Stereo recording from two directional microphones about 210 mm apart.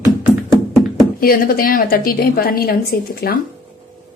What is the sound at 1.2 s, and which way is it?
A woman's voice, 45° left (ahead or behind).